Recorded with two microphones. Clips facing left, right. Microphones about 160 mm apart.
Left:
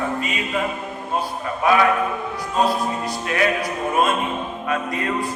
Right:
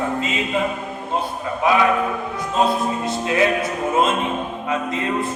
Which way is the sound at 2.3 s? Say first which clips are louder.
Right 1 dB; 20° right (ahead or behind).